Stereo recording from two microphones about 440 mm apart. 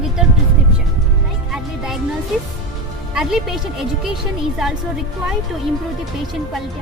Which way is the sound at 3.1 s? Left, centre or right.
Centre.